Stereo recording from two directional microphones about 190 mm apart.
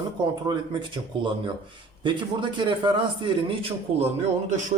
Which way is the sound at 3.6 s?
30° right (ahead or behind).